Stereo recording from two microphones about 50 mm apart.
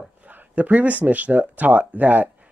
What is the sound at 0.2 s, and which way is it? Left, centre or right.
Speech, right.